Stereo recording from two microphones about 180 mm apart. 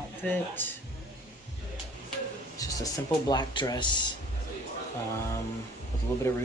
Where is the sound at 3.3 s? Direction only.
25° left (ahead or behind).